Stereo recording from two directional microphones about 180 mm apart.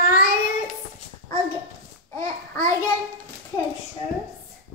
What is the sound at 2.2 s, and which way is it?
Babbling, 15° left (ahead or behind).